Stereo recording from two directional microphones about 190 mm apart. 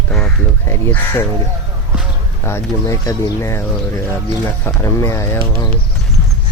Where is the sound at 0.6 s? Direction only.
10° left (ahead or behind).